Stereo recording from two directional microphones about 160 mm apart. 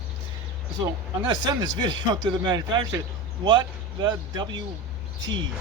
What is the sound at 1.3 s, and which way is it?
Speech, 25° right (ahead or behind).